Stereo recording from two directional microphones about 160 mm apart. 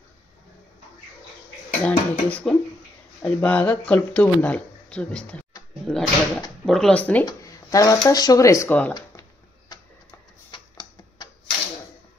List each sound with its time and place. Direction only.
1.8 s speech: 10° left (ahead or behind)
7.2 s speech: 20° left (ahead or behind)
10.5 s a sound: 25° left (ahead or behind)